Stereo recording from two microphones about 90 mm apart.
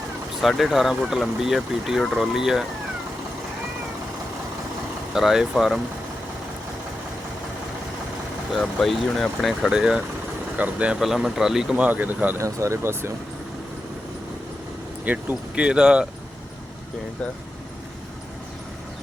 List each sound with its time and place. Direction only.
0.4 s speech: centre (ahead or behind)
5.1 s speech: 5° right (ahead or behind)
8.5 s speech: centre (ahead or behind); by 12.4 s 20° right (ahead or behind)
12.4 s speech: 35° right (ahead or behind)
15.0 s speech: 15° right (ahead or behind)